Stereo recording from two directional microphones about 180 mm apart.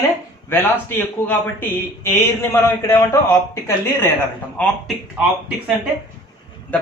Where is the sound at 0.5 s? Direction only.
10° left (ahead or behind).